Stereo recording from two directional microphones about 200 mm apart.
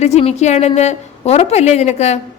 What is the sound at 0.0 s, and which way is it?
A woman's voice, 30° left (ahead or behind).